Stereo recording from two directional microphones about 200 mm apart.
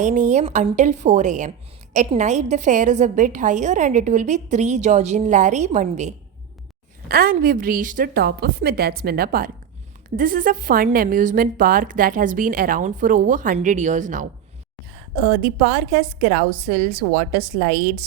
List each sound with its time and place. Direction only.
0.0 s a woman's voice: 40° right (ahead or behind)
7.1 s a woman's voice: 50° right (ahead or behind)